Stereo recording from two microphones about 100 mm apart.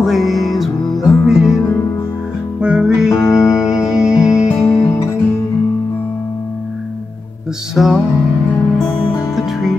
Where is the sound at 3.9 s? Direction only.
10° right (ahead or behind).